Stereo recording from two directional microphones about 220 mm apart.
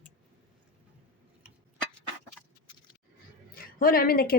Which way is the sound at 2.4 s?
10° left (ahead or behind).